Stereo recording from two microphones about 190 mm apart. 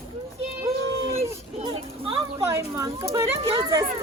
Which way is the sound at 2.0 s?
15° right (ahead or behind).